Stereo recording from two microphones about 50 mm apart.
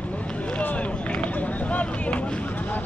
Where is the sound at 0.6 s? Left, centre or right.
Left.